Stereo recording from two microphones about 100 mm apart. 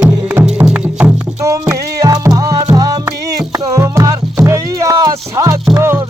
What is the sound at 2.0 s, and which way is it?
Music, 35° right (ahead or behind).